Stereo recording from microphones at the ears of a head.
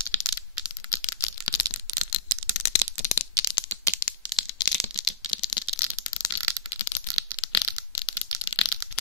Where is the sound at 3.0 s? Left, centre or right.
Left.